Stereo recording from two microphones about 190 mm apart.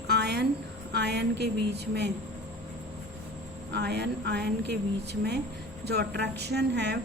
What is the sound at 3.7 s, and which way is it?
A woman's voice, 60° right (ahead or behind).